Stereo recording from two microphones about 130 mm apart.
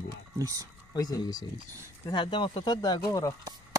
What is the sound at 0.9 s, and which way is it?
Speech, 30° left (ahead or behind).